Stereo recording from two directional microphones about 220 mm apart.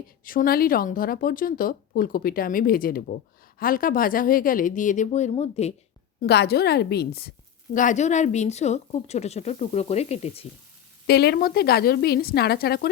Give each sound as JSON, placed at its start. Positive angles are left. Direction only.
{"t": 0.3, "sound": "a woman's voice", "side_deg": 40}
{"t": 6.2, "sound": "a woman's voice", "side_deg": 50}
{"t": 11.0, "sound": "a woman's voice", "side_deg": 45}